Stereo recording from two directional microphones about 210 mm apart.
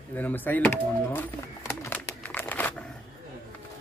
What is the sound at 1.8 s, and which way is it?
Crumpling, 10° left (ahead or behind).